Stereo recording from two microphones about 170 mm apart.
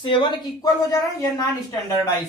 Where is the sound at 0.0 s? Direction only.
30° left (ahead or behind).